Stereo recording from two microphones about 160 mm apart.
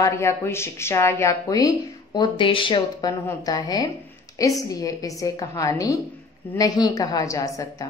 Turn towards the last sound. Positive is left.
turn(degrees=20)  # may be behind; listen again after turning